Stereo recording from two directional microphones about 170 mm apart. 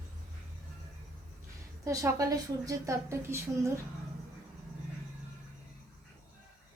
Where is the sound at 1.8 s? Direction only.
20° right (ahead or behind).